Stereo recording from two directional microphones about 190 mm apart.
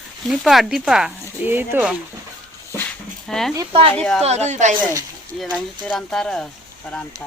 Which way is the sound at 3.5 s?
25° right (ahead or behind).